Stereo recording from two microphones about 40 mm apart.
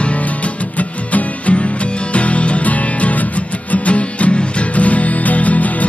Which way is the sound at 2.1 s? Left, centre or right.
Left.